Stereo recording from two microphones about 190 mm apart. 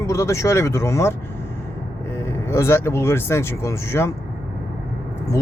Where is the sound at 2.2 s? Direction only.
15° left (ahead or behind).